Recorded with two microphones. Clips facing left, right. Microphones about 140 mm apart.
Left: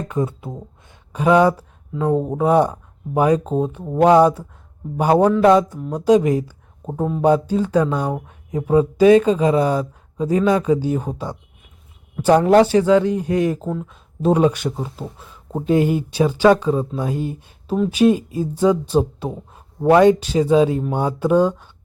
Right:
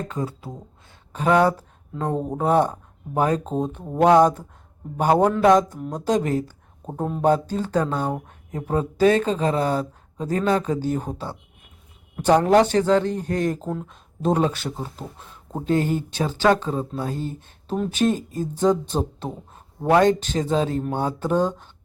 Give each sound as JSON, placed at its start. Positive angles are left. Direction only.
{"t": 0.1, "sound": "speech", "side_deg": 20}
{"t": 1.1, "sound": "speech", "side_deg": 10}
{"t": 7.0, "sound": "speech", "side_deg": 0}
{"t": 7.3, "sound": "speech", "side_deg": 10}
{"t": 12.4, "sound": "speech", "side_deg": 10}